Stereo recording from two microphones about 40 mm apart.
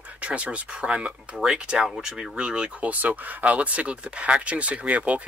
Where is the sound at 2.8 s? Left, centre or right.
Right.